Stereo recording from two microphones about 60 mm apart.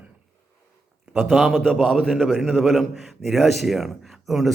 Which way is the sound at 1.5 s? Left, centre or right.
Centre.